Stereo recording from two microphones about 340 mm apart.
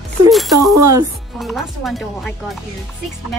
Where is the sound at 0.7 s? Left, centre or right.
Right.